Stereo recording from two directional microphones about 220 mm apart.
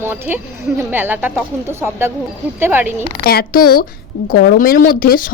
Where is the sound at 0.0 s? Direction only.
10° right (ahead or behind).